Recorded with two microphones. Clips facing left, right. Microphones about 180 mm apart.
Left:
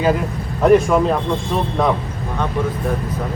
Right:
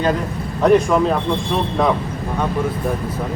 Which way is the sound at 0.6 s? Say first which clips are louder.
Left 1 dB; centre (ahead or behind).